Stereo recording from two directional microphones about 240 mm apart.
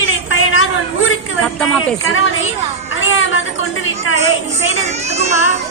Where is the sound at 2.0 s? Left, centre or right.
Left.